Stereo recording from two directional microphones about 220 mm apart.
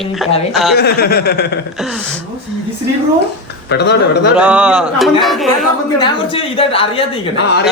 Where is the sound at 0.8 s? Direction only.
45° left (ahead or behind).